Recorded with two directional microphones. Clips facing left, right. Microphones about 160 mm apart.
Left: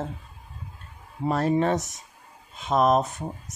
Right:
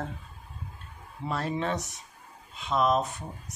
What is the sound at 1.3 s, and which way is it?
Speech, 45° left (ahead or behind).